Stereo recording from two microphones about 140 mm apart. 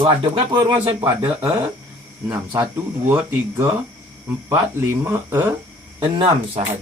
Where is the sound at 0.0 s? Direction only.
45° right (ahead or behind).